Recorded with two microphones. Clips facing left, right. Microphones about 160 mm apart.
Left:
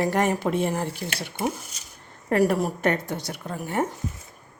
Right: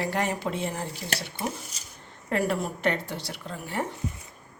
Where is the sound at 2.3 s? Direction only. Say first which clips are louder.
Left 6 dB; 40° left (ahead or behind).